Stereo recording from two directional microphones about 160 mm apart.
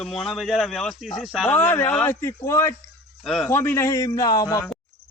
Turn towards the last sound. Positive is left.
turn(degrees=20)  # may be behind; listen again after turning